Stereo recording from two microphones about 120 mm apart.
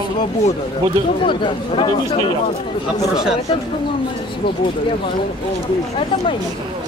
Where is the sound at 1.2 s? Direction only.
45° left (ahead or behind).